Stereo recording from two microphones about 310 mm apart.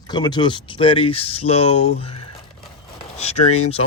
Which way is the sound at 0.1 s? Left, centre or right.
Centre.